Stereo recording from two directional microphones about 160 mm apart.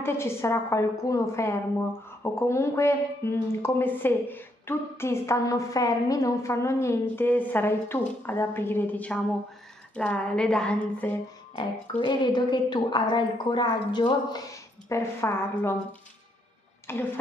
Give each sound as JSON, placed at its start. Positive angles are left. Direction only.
{"t": 0.0, "sound": "a woman's voice", "side_deg": 15}
{"t": 12.0, "sound": "a woman's voice", "side_deg": 30}
{"t": 16.9, "sound": "a woman's voice", "side_deg": 15}